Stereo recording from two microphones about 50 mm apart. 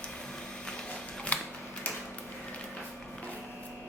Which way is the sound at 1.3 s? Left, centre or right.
Left.